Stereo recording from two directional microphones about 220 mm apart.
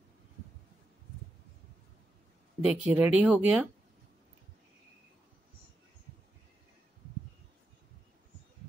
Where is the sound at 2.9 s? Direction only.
5° right (ahead or behind).